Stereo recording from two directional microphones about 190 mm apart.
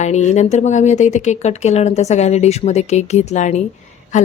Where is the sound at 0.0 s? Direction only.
35° left (ahead or behind).